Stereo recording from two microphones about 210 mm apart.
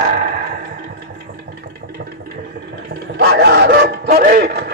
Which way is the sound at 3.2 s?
50° right (ahead or behind).